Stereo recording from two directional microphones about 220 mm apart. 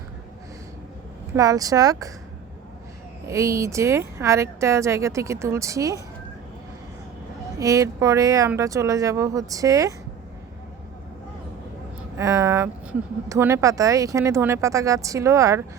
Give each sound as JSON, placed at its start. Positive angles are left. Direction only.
{"t": 1.3, "sound": "speech", "side_deg": -15}
{"t": 3.2, "sound": "speech", "side_deg": -15}
{"t": 7.6, "sound": "speech", "side_deg": -15}
{"t": 12.1, "sound": "speech", "side_deg": -15}